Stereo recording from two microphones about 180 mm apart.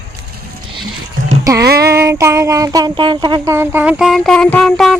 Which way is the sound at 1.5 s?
20° right (ahead or behind).